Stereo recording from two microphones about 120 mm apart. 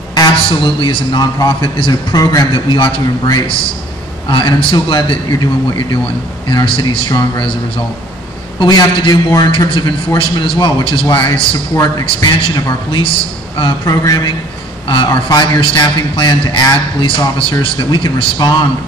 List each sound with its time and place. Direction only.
0.1 s a man's voice: 40° left (ahead or behind)
9.7 s a man's voice: 45° left (ahead or behind)
14.0 s a man's voice: 30° left (ahead or behind)
15.6 s a man's voice: 40° left (ahead or behind)